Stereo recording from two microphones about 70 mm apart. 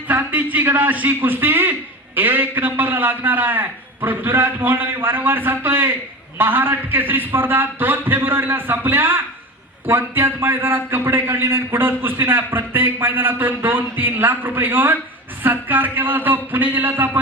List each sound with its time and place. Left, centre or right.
0.1 s a man's voice: right